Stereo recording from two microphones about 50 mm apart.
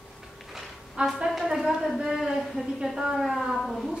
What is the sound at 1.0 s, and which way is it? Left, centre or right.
Speech, right.